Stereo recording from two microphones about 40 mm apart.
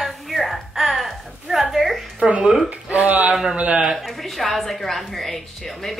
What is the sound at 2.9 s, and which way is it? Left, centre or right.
Speech, right.